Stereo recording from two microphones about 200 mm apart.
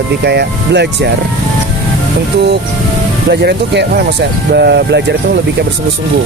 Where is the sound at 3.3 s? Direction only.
55° right (ahead or behind).